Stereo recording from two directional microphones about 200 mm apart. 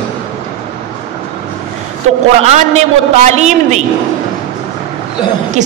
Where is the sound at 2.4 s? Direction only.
35° right (ahead or behind).